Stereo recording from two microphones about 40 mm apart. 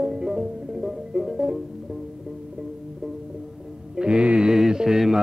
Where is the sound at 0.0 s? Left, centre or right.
Centre.